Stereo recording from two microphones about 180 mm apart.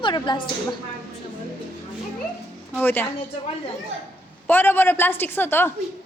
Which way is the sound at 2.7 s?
10° left (ahead or behind).